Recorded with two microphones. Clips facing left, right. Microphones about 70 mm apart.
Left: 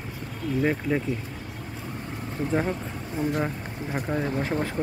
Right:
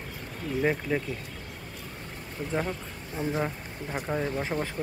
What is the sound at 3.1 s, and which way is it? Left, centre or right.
Speech, centre.